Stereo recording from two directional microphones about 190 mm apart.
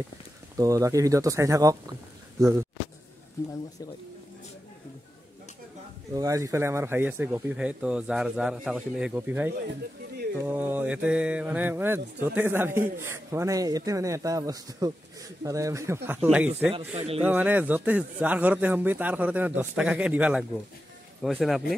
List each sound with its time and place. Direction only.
0.6 s a man's voice: 15° right (ahead or behind)
6.1 s a man's voice: 20° right (ahead or behind)
16.7 s a man's voice: 30° right (ahead or behind)
17.2 s a man's voice: 10° right (ahead or behind)